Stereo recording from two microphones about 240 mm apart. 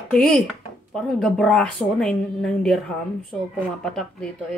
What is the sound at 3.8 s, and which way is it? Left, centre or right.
Speech, centre.